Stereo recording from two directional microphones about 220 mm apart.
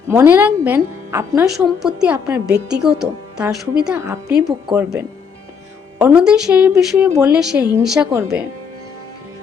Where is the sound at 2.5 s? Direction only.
50° right (ahead or behind).